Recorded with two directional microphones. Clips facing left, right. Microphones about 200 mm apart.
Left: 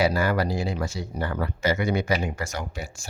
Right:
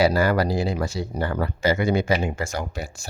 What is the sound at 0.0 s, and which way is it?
Speech, 35° right (ahead or behind).